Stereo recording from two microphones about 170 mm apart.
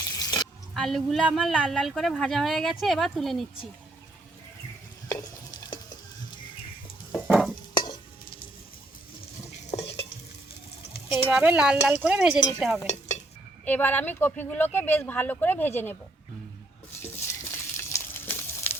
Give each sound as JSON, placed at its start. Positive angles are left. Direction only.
{"t": 0.2, "sound": "a sound", "side_deg": 25}
{"t": 0.7, "sound": "speech", "side_deg": 0}
{"t": 5.0, "sound": "stir", "side_deg": 20}
{"t": 7.3, "sound": "stir", "side_deg": -5}
{"t": 7.7, "sound": "stir", "side_deg": 25}
{"t": 11.1, "sound": "speech", "side_deg": -10}
{"t": 13.7, "sound": "speech", "side_deg": 10}
{"t": 17.0, "sound": "frying", "side_deg": 15}